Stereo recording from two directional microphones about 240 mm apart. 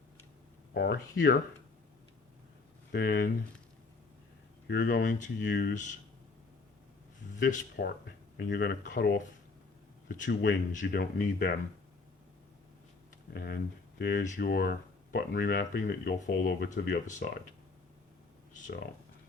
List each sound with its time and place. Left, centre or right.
0.7 s speech: left
2.9 s speech: left
4.7 s speech: left
7.3 s speech: left
13.3 s speech: left
18.5 s a sound: left